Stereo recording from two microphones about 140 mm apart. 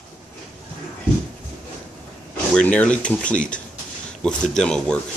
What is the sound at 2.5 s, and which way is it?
A man's voice, 10° left (ahead or behind).